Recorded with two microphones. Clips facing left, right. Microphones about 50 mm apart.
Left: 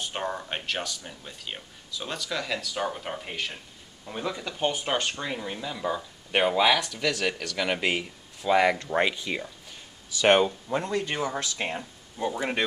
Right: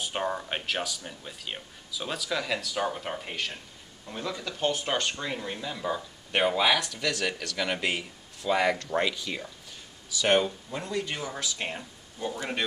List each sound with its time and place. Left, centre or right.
0.0 s speech: centre
4.0 s speech: centre
5.2 s speech: centre
8.7 s speech: left
10.7 s speech: left
11.5 s speech: centre